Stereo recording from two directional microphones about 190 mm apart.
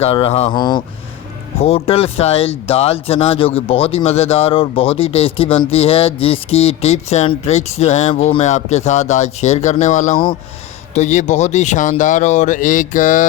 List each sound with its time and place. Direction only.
0.0 s speech: 30° left (ahead or behind)